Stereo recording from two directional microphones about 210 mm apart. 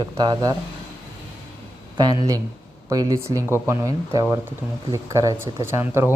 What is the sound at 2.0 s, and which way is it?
Speech, 15° right (ahead or behind).